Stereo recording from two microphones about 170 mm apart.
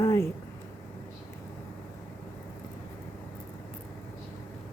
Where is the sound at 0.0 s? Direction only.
15° left (ahead or behind).